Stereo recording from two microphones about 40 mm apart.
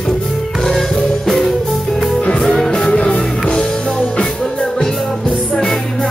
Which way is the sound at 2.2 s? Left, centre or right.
Left.